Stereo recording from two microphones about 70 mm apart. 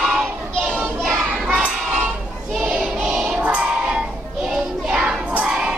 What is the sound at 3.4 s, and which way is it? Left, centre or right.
Child singing, centre.